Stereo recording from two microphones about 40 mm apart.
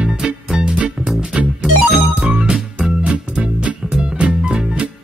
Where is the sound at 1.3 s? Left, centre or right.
Centre.